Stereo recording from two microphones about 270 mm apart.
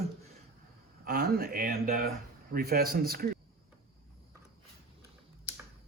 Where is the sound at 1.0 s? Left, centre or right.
Right.